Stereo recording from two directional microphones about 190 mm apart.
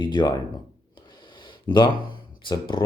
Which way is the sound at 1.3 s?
25° left (ahead or behind).